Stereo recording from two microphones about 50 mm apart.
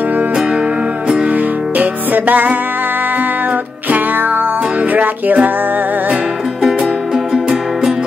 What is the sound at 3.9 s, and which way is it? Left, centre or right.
Music, right.